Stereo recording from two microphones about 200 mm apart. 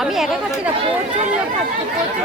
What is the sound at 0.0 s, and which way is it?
Speech, centre (ahead or behind).